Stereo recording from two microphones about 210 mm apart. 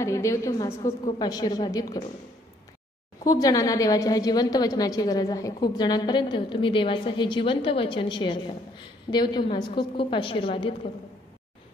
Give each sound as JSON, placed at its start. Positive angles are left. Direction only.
{"t": 0.0, "sound": "a woman's voice", "side_deg": 15}
{"t": 3.3, "sound": "a woman's voice", "side_deg": 15}